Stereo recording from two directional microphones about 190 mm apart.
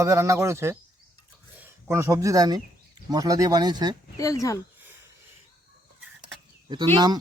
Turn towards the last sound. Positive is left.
turn(degrees=-25)  # may be behind; listen again after turning